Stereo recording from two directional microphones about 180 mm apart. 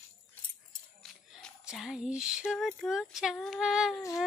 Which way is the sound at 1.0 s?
5° left (ahead or behind).